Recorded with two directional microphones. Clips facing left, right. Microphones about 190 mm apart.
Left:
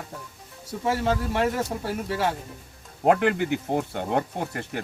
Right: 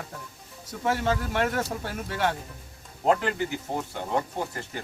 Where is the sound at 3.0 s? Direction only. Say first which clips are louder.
Left 4 dB; 60° left (ahead or behind).